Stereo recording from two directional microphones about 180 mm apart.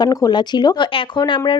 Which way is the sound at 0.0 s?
20° left (ahead or behind).